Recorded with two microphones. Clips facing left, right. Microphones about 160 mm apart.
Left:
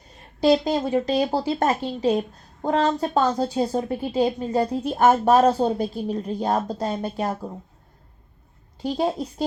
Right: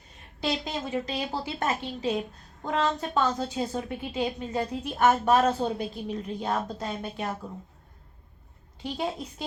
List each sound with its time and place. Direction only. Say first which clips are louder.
0.4 s speech: left 11 dB; 35° left (ahead or behind)
8.8 s speech: left 8 dB; 35° left (ahead or behind)